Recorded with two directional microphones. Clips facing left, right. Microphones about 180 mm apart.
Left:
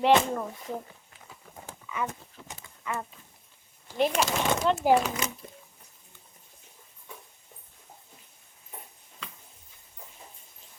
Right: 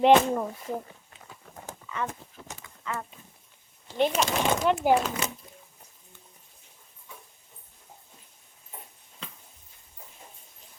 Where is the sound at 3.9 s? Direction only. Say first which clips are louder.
Right 1 dB; centre (ahead or behind).